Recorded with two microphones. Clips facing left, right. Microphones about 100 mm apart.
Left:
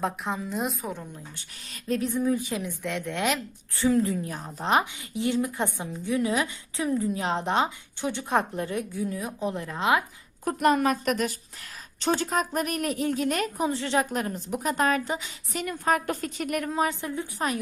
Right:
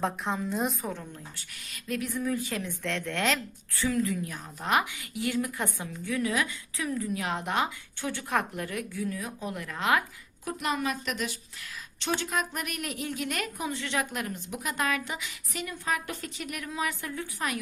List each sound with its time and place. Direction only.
0.0 s a woman's voice: centre (ahead or behind)
1.7 s a woman's voice: 30° left (ahead or behind); by 3.4 s 15° left (ahead or behind)
3.8 s a woman's voice: 30° left (ahead or behind)
10.4 s a woman's voice: 50° left (ahead or behind)
15.6 s a woman's voice: 45° left (ahead or behind)
17.0 s a woman's voice: 25° left (ahead or behind)